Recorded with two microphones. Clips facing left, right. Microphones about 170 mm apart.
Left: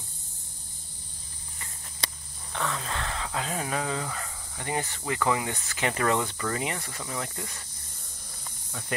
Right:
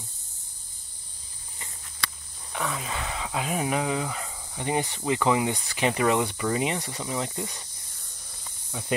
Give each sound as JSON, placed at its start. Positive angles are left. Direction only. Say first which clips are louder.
{"t": 2.5, "sound": "speech", "louder": "right 1 dB", "side_deg": -10}
{"t": 8.7, "sound": "speech", "louder": "right 4 dB", "side_deg": -15}